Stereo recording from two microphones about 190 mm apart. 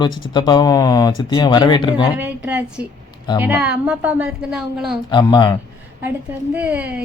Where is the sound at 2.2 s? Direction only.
10° right (ahead or behind).